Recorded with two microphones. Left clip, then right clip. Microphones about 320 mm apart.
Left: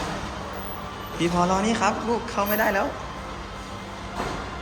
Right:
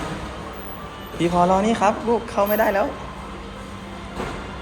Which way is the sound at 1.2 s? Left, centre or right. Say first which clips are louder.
Right 5 dB; centre.